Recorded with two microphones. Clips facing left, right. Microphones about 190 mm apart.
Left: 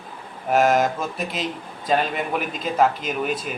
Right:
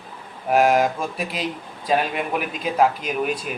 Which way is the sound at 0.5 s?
Centre (ahead or behind).